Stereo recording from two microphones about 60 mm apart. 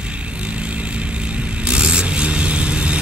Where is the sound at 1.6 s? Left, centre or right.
Centre.